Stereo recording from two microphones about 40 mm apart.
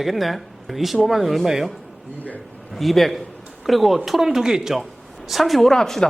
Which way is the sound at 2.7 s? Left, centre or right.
Centre.